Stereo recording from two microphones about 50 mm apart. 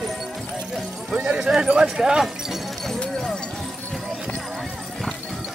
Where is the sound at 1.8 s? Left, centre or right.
Centre.